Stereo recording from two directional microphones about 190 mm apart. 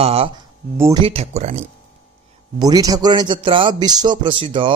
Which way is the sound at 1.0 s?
35° right (ahead or behind).